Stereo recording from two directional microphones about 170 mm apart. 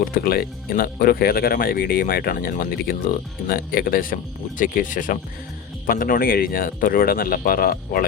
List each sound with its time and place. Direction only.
0.0 s speech: 60° left (ahead or behind)